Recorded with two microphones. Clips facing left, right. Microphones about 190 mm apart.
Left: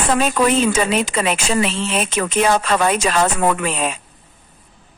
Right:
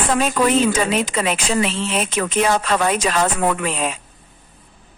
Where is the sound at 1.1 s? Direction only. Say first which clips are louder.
Left 1 dB; 70° left (ahead or behind).